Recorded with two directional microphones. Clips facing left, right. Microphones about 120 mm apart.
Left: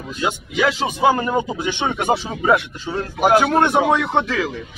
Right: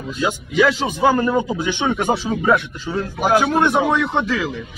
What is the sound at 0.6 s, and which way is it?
Speech, 20° left (ahead or behind).